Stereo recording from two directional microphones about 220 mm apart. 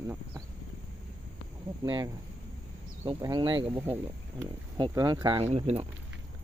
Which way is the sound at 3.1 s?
20° right (ahead or behind).